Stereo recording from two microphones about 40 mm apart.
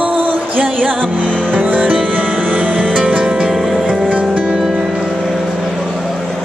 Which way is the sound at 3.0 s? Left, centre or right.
Centre.